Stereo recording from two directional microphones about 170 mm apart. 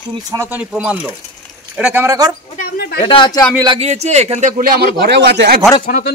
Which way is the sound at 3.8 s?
40° right (ahead or behind).